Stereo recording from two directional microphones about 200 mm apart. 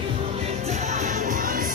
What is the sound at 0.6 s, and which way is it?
Music, 35° right (ahead or behind).